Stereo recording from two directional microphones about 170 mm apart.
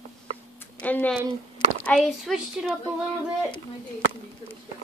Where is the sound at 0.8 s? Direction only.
10° left (ahead or behind).